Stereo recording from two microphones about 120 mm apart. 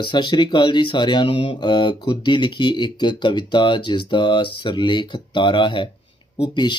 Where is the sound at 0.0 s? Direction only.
40° left (ahead or behind).